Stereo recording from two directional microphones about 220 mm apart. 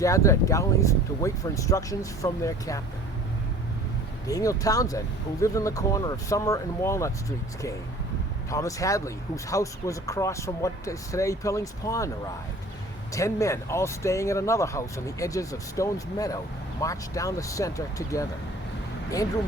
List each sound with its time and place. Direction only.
0.0 s speech: 15° left (ahead or behind)
4.3 s speech: 15° left (ahead or behind)
13.1 s speech: 15° left (ahead or behind)